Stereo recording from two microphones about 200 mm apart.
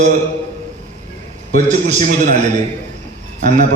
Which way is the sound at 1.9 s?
40° right (ahead or behind).